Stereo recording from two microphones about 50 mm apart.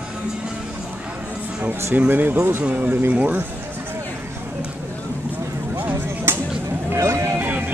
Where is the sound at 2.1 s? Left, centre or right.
Right.